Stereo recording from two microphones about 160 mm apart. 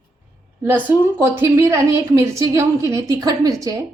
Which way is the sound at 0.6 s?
15° right (ahead or behind).